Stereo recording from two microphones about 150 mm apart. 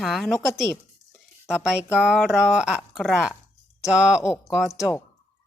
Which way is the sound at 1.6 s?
5° right (ahead or behind).